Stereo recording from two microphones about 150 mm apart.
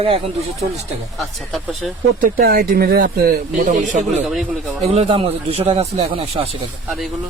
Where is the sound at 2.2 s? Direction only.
80° right; by 4.2 s 55° right (ahead or behind).